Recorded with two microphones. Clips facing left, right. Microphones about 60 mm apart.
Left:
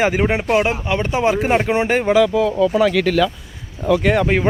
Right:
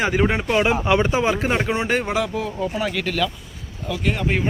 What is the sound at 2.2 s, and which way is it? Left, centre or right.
Speech, left.